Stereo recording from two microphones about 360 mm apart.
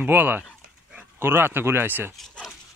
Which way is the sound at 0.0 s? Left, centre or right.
Centre.